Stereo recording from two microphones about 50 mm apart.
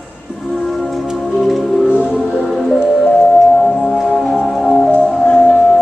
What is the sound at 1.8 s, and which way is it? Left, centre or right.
Music, centre.